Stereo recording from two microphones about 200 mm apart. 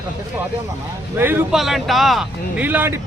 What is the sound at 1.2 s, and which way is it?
Speech, 10° right (ahead or behind).